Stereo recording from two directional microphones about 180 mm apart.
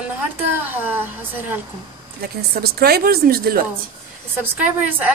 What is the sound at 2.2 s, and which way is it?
Speech, 60° right (ahead or behind).